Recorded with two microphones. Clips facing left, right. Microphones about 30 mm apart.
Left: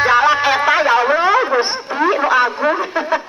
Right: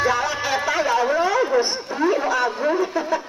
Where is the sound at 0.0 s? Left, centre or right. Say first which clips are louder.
Left 9 dB; left.